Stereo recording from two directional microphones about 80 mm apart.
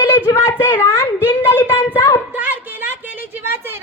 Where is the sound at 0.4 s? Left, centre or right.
Left.